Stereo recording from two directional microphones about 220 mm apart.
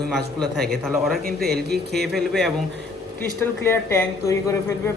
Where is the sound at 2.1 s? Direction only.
Centre (ahead or behind).